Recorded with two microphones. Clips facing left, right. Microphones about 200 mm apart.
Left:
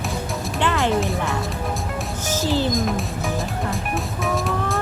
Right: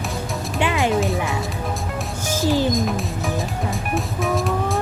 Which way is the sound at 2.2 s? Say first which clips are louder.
Right 2 dB; 10° right (ahead or behind).